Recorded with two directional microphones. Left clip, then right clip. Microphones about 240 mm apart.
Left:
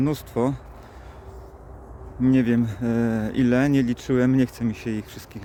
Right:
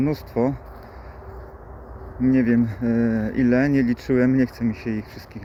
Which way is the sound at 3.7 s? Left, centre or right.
Left.